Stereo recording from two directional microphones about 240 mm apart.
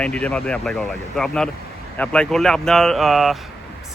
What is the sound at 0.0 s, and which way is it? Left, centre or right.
Speech, centre.